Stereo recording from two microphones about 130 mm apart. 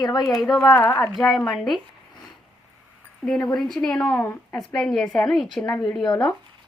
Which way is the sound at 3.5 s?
Centre (ahead or behind).